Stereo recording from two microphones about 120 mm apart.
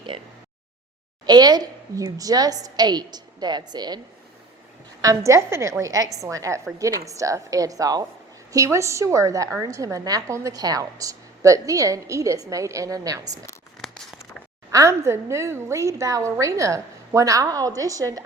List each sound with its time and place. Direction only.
1.2 s a woman's voice: 35° right (ahead or behind)
5.0 s a woman's voice: 25° right (ahead or behind)
13.8 s a sound: centre (ahead or behind)
14.7 s a woman's voice: 25° right (ahead or behind)